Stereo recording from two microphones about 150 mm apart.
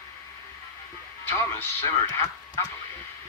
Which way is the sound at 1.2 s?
15° left (ahead or behind).